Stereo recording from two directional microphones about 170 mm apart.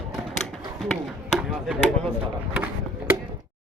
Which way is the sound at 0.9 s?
Centre (ahead or behind).